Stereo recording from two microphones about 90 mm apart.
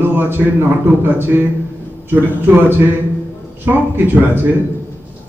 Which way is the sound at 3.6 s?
20° right (ahead or behind).